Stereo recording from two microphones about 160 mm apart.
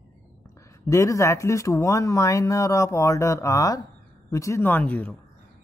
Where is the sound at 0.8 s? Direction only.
20° left (ahead or behind).